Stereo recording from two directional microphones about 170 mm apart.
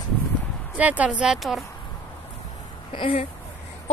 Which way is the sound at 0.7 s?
10° right (ahead or behind).